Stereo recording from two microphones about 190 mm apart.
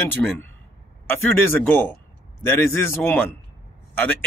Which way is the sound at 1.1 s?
10° left (ahead or behind).